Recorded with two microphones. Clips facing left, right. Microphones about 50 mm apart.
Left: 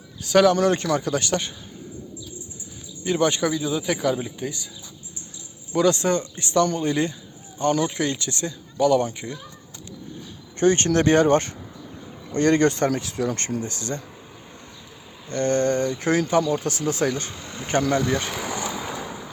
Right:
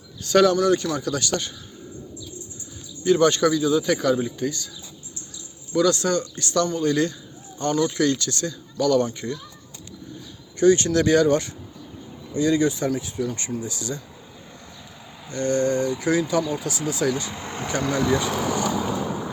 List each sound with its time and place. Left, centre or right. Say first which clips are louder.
0.2 s speech: even; centre
0.5 s a man's voice: even; left
3.0 s a man's voice: right 4 dB; centre
5.7 s speech: even; left
10.6 s a man's voice: right 1 dB; left
12.3 s speech: left 2 dB; left
15.3 s speech: left 1 dB; left
17.3 s speech: right 5 dB; right
17.7 s speech: left 1 dB; left